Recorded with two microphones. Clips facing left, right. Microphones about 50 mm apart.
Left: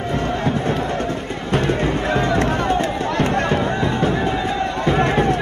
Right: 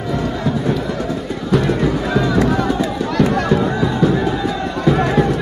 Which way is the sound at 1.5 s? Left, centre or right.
Left.